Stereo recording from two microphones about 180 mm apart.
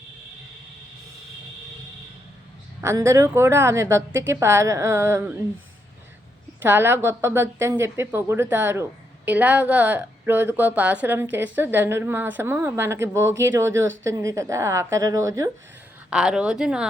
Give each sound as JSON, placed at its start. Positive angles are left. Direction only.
{"t": 2.8, "sound": "speech", "side_deg": -15}
{"t": 6.6, "sound": "speech", "side_deg": -10}
{"t": 16.0, "sound": "a woman's voice", "side_deg": -5}